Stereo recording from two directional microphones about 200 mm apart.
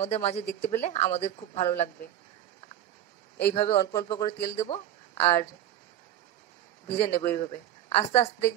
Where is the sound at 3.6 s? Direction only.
30° left (ahead or behind).